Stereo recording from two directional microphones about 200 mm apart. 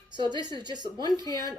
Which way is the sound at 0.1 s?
20° right (ahead or behind).